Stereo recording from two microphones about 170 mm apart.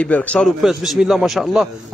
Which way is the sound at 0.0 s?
10° left (ahead or behind).